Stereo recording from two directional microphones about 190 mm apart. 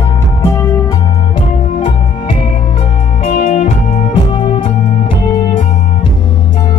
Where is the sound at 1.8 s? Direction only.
25° left (ahead or behind).